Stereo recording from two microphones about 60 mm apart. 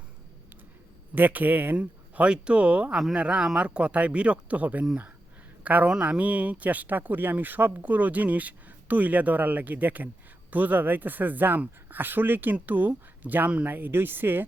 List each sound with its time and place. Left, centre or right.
1.1 s speech: right